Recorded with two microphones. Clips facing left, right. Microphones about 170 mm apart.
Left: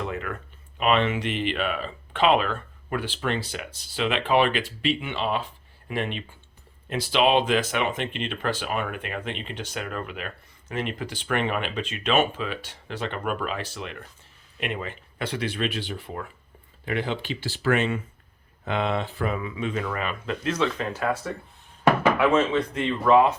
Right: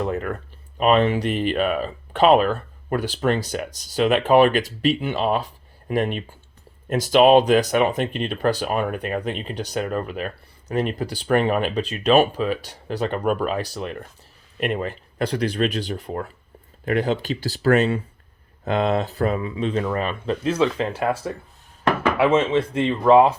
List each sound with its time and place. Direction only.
0.0 s a sound: 40° right (ahead or behind)
0.8 s speech: 40° right (ahead or behind)
22.2 s speech: 25° right (ahead or behind)